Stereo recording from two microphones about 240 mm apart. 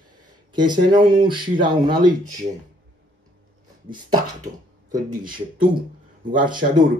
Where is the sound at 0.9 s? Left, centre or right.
Right.